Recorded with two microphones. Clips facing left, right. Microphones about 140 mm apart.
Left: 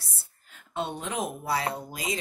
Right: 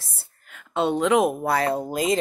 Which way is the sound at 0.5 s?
90° right.